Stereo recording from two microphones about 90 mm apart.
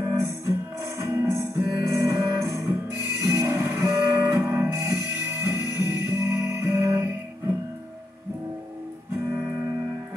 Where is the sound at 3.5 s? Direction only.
30° right (ahead or behind).